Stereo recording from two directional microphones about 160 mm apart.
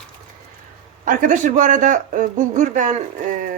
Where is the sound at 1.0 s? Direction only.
55° right (ahead or behind).